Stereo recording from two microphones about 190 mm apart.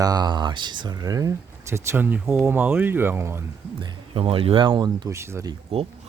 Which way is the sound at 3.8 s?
25° right (ahead or behind).